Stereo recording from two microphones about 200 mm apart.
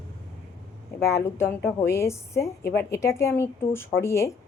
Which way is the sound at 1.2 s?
10° left (ahead or behind).